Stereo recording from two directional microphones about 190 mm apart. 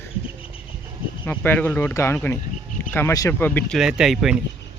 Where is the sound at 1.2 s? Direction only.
10° left (ahead or behind).